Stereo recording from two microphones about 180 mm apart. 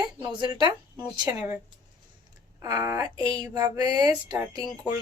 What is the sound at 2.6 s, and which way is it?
Speech, 15° right (ahead or behind).